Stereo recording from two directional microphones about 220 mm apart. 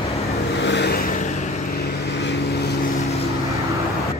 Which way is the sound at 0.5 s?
50° left (ahead or behind).